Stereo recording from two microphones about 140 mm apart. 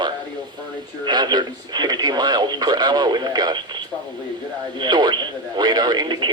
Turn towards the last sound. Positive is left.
turn(degrees=-30)  # may be behind; listen again after turning